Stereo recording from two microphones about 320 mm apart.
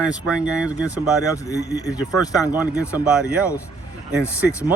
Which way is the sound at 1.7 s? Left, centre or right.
Centre.